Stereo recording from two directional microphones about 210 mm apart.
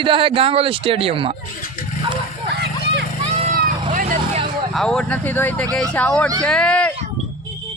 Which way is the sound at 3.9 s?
35° right (ahead or behind).